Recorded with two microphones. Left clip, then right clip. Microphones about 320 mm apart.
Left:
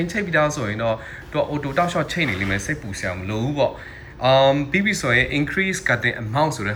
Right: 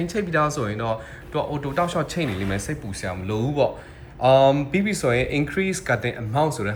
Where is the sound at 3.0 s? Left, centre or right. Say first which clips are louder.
Left 1 dB; centre.